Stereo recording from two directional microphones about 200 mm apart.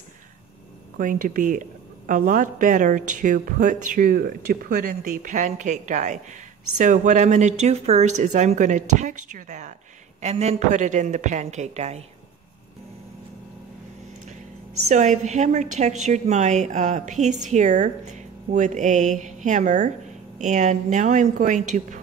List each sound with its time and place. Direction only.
0.9 s a woman's voice: 40° right (ahead or behind)
14.9 s a woman's voice: 35° right (ahead or behind)